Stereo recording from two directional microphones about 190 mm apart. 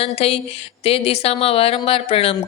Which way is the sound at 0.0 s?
30° left (ahead or behind).